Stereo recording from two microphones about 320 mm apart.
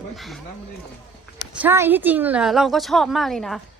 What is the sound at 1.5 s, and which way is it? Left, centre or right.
Speech, centre.